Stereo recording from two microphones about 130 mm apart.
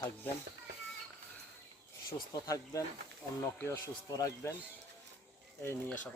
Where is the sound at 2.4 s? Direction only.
25° left (ahead or behind).